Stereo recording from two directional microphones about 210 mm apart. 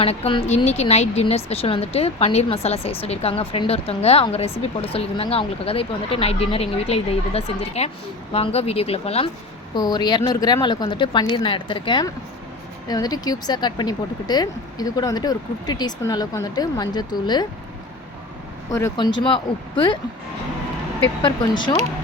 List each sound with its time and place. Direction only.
0.0 s speech: 30° left (ahead or behind)
18.7 s speech: 15° left (ahead or behind)